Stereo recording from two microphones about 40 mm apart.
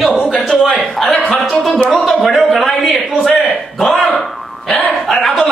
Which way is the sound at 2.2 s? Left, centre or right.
Centre.